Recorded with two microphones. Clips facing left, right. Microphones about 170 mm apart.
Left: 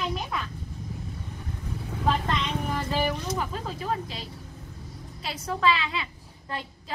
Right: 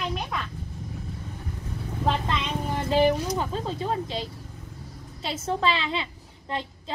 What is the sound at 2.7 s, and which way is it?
A woman's voice, 25° right (ahead or behind).